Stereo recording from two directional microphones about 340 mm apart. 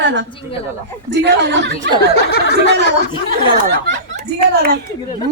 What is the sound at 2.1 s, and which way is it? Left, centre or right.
Speech, left.